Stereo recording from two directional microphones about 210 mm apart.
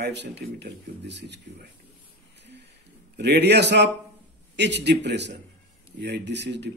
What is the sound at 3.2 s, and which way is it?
A man's voice, 55° right (ahead or behind).